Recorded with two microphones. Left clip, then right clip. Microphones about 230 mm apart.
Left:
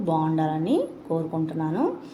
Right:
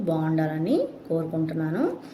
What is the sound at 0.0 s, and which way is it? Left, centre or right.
A woman's voice, centre.